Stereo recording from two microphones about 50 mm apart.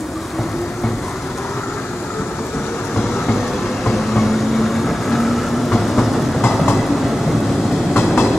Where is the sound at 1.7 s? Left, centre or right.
Left.